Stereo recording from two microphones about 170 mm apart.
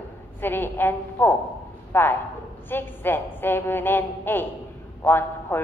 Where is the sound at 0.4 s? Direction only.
10° left (ahead or behind).